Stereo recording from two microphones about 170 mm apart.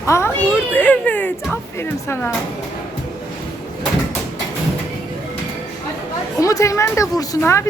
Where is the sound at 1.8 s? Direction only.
15° left (ahead or behind).